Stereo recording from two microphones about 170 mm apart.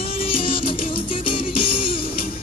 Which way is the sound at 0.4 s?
30° left (ahead or behind).